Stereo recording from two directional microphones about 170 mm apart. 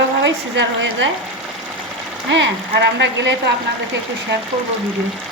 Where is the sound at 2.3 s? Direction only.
85° right.